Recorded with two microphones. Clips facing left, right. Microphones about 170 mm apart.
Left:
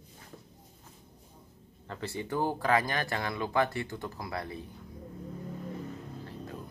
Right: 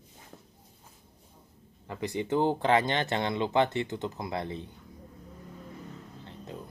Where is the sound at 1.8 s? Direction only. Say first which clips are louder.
Right 4 dB; 15° right (ahead or behind).